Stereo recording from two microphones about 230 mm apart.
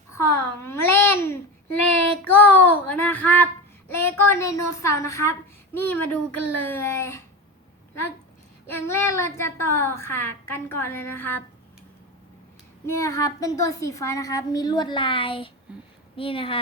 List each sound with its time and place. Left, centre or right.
0.2 s babbling: centre
2.2 s a sound: centre
5.7 s speech: centre
8.6 s speech: centre
12.8 s speech: centre
15.7 s a sound: centre
16.1 s a woman's voice: left